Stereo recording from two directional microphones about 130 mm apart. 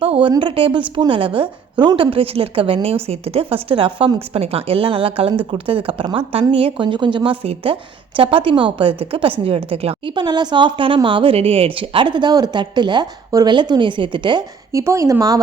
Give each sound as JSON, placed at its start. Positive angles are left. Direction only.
{"t": 0.0, "sound": "a woman's voice", "side_deg": -45}
{"t": 10.2, "sound": "a woman's voice", "side_deg": -35}
{"t": 14.7, "sound": "speech", "side_deg": -25}